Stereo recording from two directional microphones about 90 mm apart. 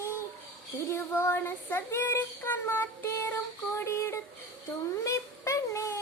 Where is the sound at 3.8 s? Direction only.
30° left (ahead or behind).